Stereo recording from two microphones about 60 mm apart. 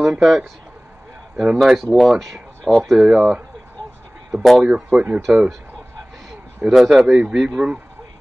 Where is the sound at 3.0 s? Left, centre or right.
Centre.